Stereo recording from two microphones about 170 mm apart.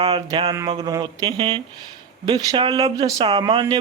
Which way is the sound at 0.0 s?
25° right (ahead or behind).